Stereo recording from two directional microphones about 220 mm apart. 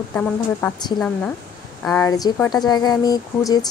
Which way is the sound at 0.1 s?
10° left (ahead or behind).